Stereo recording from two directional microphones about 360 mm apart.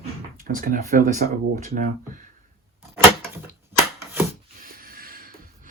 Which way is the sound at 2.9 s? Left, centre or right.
Centre.